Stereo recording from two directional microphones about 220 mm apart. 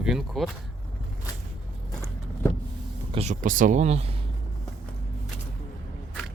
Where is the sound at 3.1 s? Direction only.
30° right (ahead or behind).